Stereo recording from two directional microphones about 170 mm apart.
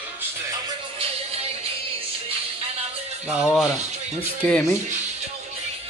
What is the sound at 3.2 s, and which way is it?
Speech, 5° right (ahead or behind).